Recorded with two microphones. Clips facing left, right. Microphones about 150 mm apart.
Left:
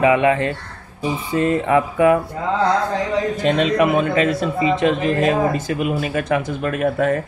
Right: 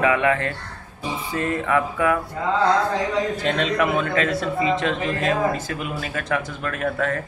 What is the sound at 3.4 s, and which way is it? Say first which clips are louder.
A man's voice: left 8 dB; 15° left (ahead or behind).